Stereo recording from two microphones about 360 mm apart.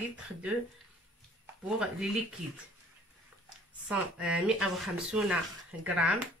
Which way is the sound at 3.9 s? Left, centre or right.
Centre.